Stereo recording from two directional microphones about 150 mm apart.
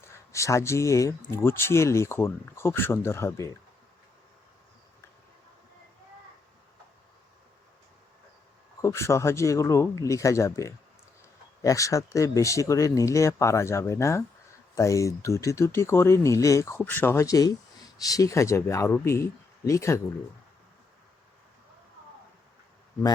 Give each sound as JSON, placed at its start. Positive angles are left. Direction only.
{"t": 0.0, "sound": "speech", "side_deg": 20}
{"t": 8.8, "sound": "speech", "side_deg": 20}